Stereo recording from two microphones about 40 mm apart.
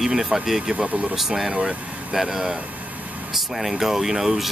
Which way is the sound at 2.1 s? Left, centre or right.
Centre.